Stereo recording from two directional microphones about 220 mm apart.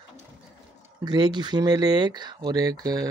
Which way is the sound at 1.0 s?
20° right (ahead or behind).